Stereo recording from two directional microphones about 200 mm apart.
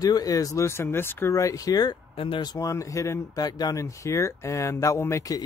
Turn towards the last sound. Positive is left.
turn(degrees=15)  # may be behind; listen again after turning